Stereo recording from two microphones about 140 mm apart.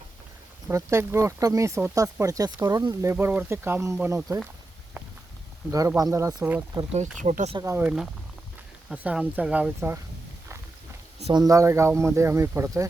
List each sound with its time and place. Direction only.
0.7 s speech: 20° right (ahead or behind)
6.0 s speech: 25° right (ahead or behind)
6.9 s speech: 55° right (ahead or behind)
7.6 s speech: 20° right (ahead or behind)
8.9 s speech: 5° right (ahead or behind)
11.3 s speech: 25° right (ahead or behind)